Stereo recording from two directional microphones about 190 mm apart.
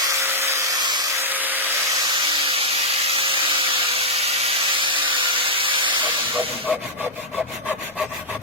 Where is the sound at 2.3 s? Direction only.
30° right (ahead or behind).